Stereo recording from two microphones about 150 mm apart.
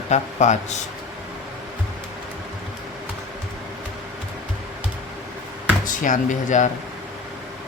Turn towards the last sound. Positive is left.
turn(degrees=55)  # may be behind; listen again after turning